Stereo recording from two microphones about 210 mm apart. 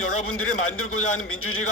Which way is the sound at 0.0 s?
90° left.